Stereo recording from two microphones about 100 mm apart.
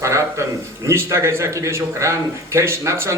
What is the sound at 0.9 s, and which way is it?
Speech, 25° right (ahead or behind).